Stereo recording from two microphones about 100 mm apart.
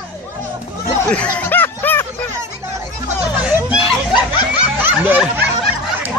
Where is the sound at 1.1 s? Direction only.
15° left (ahead or behind).